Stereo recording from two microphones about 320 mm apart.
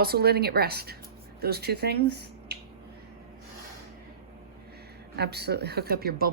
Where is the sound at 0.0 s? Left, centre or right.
Right.